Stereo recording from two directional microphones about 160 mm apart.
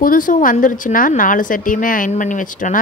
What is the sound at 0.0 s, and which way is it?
A woman's voice, 60° left (ahead or behind).